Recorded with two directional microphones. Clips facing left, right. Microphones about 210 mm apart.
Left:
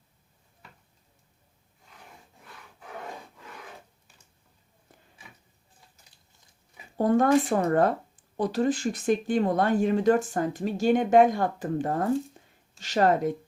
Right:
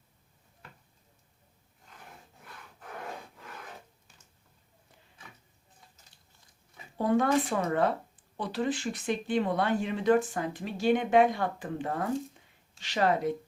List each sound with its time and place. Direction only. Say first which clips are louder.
6.9 s speech: left 4 dB; 45° left (ahead or behind)